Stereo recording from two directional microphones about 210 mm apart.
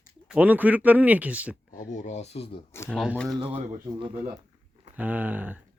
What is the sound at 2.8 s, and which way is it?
Speech, centre (ahead or behind).